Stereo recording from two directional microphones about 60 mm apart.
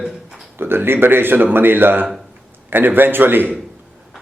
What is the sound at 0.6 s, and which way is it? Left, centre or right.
Speech, right.